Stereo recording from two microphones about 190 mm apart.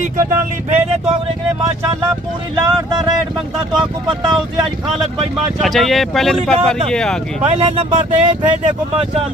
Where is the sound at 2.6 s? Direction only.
20° right (ahead or behind).